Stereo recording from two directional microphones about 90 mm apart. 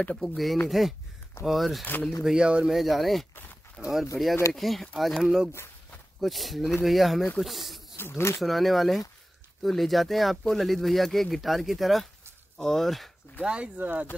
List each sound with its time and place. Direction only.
0.0 s speech: 10° left (ahead or behind)
8.0 s speech: 30° left (ahead or behind)
8.4 s speech: centre (ahead or behind)
13.5 s speech: 15° right (ahead or behind)